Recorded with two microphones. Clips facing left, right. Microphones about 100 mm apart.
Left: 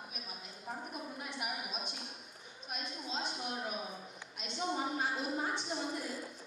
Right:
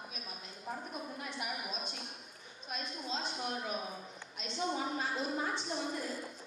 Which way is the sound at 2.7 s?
15° left (ahead or behind).